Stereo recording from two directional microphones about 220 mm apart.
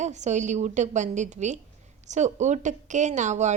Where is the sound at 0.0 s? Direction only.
30° right (ahead or behind).